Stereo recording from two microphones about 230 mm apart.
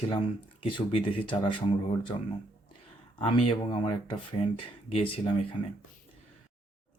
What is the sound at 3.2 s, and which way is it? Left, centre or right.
Speech, left.